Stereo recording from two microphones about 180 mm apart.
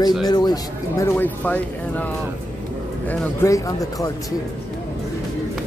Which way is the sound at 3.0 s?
10° left (ahead or behind).